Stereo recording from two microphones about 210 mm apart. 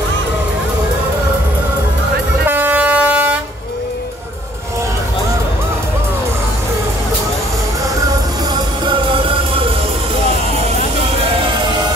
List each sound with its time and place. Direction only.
2.4 s vehicle: 10° right (ahead or behind)
8.8 s music: 25° right (ahead or behind)
11.1 s music: 25° right (ahead or behind)